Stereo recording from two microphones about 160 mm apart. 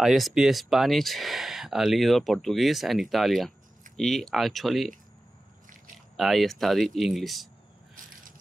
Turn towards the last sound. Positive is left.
turn(degrees=0)  # may be behind; listen again after turning